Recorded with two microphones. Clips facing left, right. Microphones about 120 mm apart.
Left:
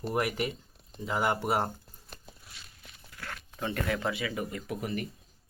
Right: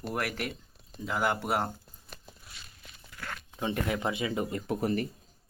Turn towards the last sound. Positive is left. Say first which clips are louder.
# right 5 dB
turn(degrees=-35)  # may be behind; listen again after turning